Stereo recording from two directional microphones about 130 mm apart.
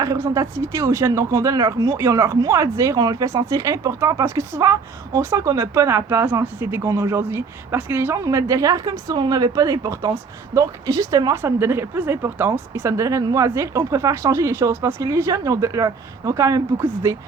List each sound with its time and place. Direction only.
0.0 s speech: 25° right (ahead or behind)